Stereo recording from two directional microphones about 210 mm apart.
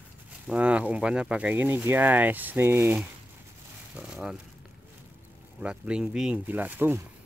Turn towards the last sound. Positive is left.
turn(degrees=-10)  # may be behind; listen again after turning